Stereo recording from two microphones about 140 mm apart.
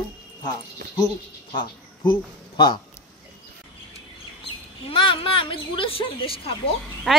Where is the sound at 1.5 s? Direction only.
35° left (ahead or behind).